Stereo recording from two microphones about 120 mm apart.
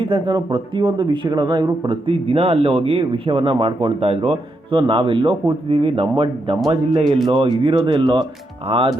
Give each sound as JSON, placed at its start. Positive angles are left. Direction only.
{"t": 0.0, "sound": "speech", "side_deg": -50}